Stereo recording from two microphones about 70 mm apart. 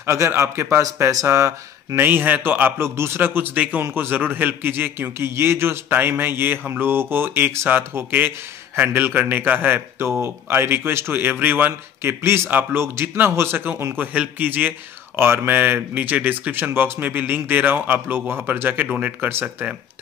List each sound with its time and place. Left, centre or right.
0.0 s a man's voice: right
13.9 s a man's voice: right